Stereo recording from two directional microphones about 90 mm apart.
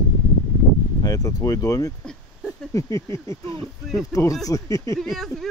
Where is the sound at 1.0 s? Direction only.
45° left (ahead or behind).